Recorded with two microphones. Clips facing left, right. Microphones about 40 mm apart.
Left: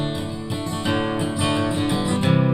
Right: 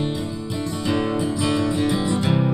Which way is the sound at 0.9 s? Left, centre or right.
Left.